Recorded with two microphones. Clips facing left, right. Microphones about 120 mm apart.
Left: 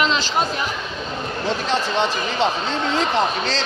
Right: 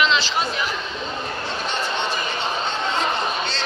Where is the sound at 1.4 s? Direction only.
90° left.